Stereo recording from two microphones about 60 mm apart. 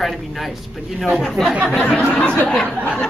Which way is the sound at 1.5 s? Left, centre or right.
Centre.